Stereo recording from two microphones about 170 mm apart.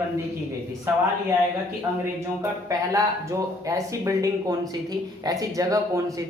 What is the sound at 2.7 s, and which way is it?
Speech, 20° right (ahead or behind).